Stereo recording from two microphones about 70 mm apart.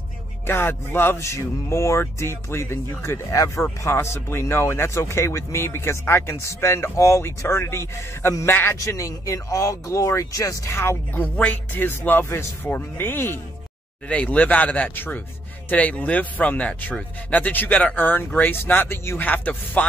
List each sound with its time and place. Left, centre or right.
0.5 s speech: left
1.1 s speech: left
3.3 s speech: left
3.8 s speech: left
10.8 s speech: left
11.3 s speech: left
14.0 s speech: centre